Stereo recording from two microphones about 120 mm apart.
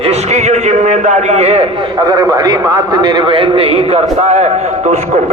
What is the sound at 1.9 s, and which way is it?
A man's voice, 30° right (ahead or behind).